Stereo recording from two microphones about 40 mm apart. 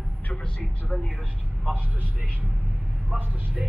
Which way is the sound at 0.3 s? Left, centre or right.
Left.